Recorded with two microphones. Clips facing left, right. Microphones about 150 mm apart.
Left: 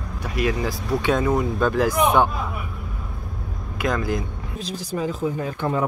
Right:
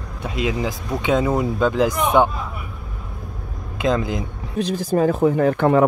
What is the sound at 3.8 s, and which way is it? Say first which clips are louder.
Speech: right 3 dB; 20° right (ahead or behind).